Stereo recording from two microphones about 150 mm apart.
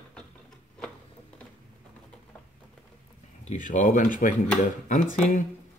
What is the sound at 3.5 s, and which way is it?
Speech, 55° left (ahead or behind).